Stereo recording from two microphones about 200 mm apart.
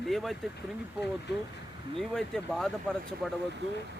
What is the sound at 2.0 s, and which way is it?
Speech, centre (ahead or behind).